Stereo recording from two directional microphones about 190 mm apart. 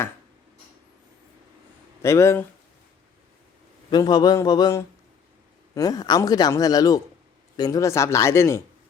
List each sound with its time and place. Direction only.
2.0 s speech: 15° left (ahead or behind)
3.8 s a man's voice: 20° left (ahead or behind)